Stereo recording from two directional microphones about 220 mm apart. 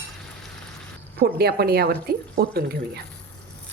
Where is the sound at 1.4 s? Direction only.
45° right (ahead or behind).